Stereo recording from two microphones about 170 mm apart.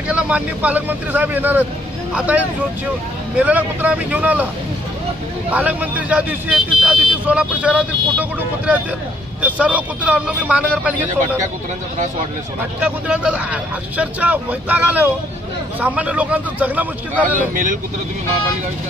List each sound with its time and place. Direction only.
0.1 s speech: 10° right (ahead or behind)
5.5 s speech: 10° right (ahead or behind)
12.8 s speech: 5° right (ahead or behind)
17.4 s speech: 50° right (ahead or behind)